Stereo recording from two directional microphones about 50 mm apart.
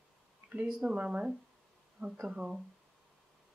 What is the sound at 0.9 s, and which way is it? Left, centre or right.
Speech, right.